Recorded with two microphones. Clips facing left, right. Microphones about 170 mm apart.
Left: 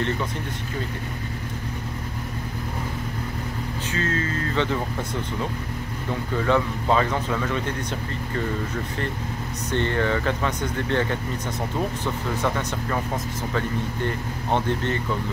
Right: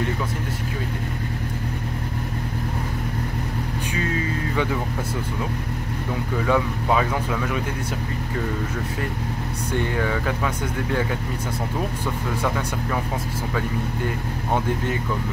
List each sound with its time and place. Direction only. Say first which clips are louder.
3.9 s speech: even; 15° right (ahead or behind)
6.3 s speech: even; 5° right (ahead or behind)
9.7 s speech: left 1 dB; 10° right (ahead or behind)
12.4 s speech: even; 5° right (ahead or behind)